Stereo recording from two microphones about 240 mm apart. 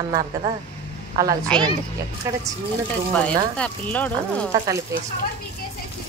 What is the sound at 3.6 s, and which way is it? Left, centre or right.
Speech, centre.